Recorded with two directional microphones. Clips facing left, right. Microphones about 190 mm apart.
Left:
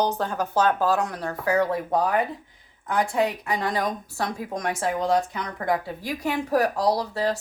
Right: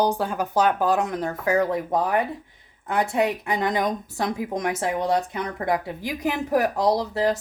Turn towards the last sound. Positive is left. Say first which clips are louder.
# right 2 dB
turn(degrees=-20)  # may be behind; listen again after turning